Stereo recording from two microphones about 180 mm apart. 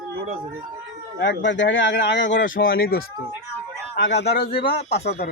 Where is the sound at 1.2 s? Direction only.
80° left.